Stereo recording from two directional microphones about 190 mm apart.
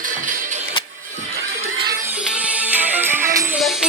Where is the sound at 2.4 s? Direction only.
10° right (ahead or behind).